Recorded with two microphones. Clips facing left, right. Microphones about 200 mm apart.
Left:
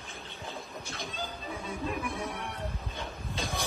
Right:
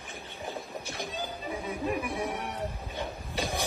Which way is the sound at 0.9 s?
15° right (ahead or behind).